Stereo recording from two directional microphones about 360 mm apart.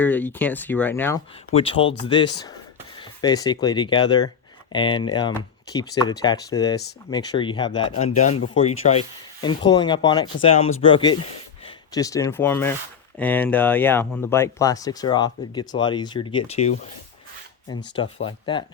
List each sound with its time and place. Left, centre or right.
0.0 s speech: centre